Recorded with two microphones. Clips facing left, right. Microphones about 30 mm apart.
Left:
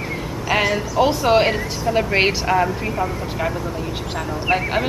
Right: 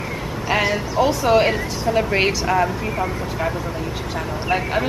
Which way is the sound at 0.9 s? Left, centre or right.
Centre.